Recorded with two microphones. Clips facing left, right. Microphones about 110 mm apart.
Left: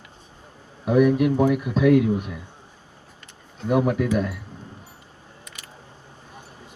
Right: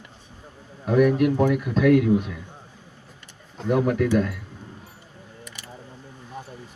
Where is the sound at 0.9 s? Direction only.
20° left (ahead or behind).